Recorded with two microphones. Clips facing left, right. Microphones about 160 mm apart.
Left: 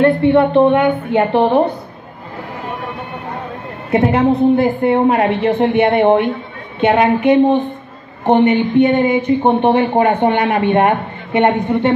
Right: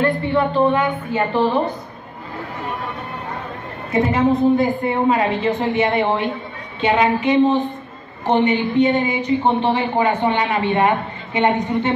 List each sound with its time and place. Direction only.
0.0 s a woman's voice: 65° left (ahead or behind)
3.9 s a woman's voice: 65° left (ahead or behind)